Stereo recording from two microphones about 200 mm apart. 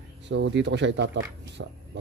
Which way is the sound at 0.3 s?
65° right (ahead or behind).